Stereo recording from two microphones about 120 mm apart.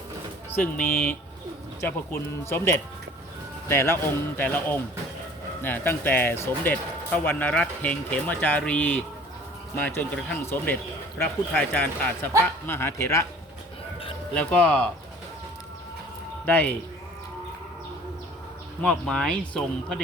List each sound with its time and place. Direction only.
0.5 s speech: 15° left (ahead or behind)
3.7 s speech: 20° left (ahead or behind)
14.3 s speech: 10° left (ahead or behind)
16.5 s speech: 15° left (ahead or behind)
18.8 s speech: 5° left (ahead or behind)